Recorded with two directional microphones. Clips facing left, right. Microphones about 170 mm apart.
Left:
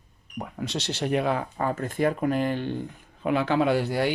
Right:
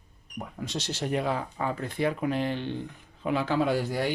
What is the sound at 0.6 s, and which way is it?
Speech, 70° left (ahead or behind).